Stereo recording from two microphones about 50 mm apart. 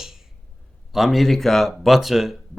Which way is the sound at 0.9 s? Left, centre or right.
Centre.